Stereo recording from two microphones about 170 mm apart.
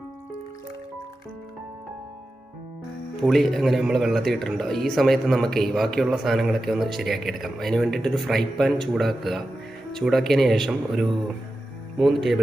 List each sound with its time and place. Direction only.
3.2 s a man's voice: centre (ahead or behind)